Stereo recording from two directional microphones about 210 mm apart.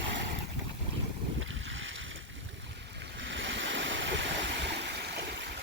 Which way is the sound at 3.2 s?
60° right (ahead or behind).